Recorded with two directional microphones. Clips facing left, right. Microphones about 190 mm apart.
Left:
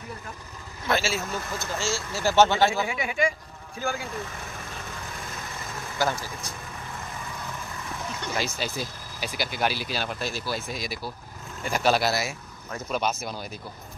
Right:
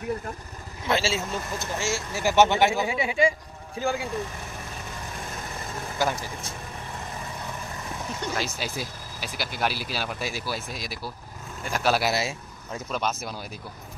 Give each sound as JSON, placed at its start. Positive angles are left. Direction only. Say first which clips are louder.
{"t": 0.8, "sound": "speech", "louder": "right 1 dB", "side_deg": -25}
{"t": 5.9, "sound": "speech", "louder": "even", "side_deg": -20}
{"t": 8.4, "sound": "speech", "louder": "left 1 dB", "side_deg": -5}
{"t": 12.1, "sound": "speech", "louder": "right 1 dB", "side_deg": -25}
{"t": 12.9, "sound": "speech", "louder": "left 2 dB", "side_deg": 0}